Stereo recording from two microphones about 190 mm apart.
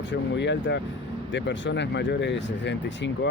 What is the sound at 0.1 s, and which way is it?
Speech, 70° left (ahead or behind).